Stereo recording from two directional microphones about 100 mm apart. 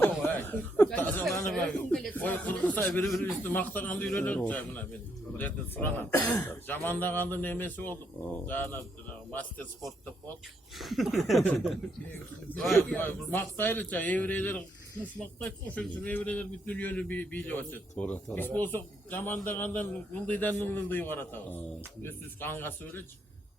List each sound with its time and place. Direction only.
0.0 s chuckle: 20° left (ahead or behind)
1.5 s a man's voice: 5° left (ahead or behind)
3.1 s speech: centre (ahead or behind)
3.4 s a man's voice: 20° left (ahead or behind)
10.8 s speech: centre (ahead or behind)
13.0 s a man's voice: 20° left (ahead or behind)